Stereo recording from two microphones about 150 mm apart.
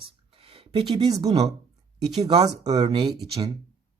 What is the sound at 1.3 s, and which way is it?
Speech, 45° right (ahead or behind).